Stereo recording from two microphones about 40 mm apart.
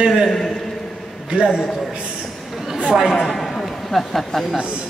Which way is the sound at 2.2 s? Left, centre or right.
Centre.